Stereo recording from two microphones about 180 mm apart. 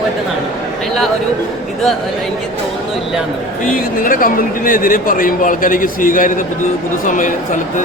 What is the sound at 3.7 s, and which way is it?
Speech, 50° left (ahead or behind).